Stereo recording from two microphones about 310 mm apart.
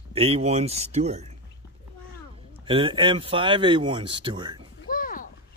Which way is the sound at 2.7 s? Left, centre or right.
Centre.